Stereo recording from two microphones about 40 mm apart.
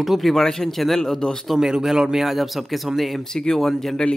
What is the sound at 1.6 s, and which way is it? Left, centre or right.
A man's voice, centre.